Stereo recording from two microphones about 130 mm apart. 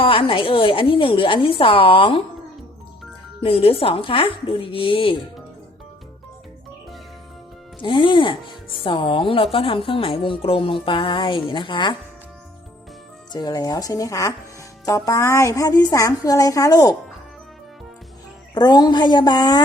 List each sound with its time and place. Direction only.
0.0 s a woman's voice: 45° left (ahead or behind)
3.4 s a woman's voice: 45° left (ahead or behind)
7.8 s speech: 40° left (ahead or behind)
13.3 s a woman's voice: 30° left (ahead or behind)
18.5 s speech: 30° left (ahead or behind)